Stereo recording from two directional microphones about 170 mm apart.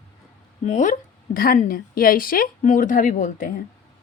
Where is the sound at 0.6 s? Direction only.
45° left (ahead or behind).